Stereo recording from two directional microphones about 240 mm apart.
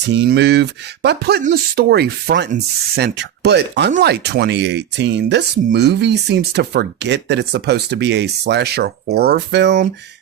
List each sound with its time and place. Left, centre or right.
0.0 s speech: right